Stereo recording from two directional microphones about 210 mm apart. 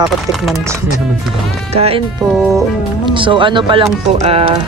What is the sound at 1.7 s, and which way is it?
Speech, 30° right (ahead or behind).